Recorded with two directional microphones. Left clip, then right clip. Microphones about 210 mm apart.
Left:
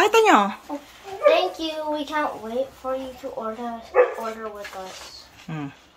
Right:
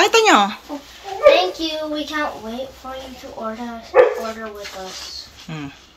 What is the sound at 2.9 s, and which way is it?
Speech, 35° left (ahead or behind).